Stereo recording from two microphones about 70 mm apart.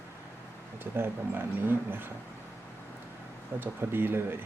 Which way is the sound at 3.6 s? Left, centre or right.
Right.